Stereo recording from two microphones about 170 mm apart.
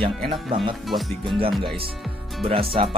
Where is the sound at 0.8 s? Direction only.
Centre (ahead or behind).